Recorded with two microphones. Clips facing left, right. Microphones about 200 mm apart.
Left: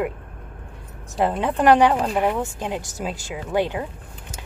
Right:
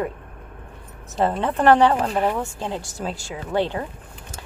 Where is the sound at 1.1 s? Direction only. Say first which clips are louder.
Even; 10° left (ahead or behind).